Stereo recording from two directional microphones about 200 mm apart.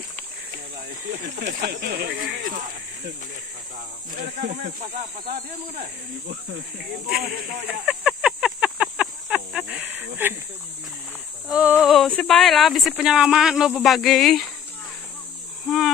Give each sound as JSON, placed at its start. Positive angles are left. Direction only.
{"t": 1.3, "sound": "speech", "side_deg": -40}
{"t": 1.7, "sound": "speech", "side_deg": -55}
{"t": 4.2, "sound": "speech", "side_deg": -45}
{"t": 7.1, "sound": "speech", "side_deg": -5}
{"t": 7.8, "sound": "a sound", "side_deg": -5}
{"t": 9.9, "sound": "speech", "side_deg": -10}
{"t": 11.4, "sound": "speech", "side_deg": -5}
{"t": 15.6, "sound": "speech", "side_deg": 0}